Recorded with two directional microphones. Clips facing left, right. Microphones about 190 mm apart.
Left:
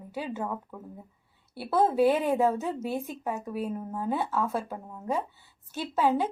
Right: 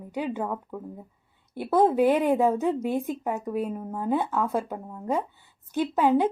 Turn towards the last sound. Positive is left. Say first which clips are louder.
# right 4 dB
turn(degrees=-15)  # may be behind; listen again after turning